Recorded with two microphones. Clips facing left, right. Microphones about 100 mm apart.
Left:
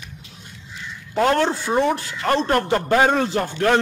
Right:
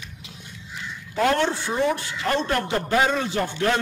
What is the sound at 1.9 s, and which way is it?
A man's voice, 40° left (ahead or behind).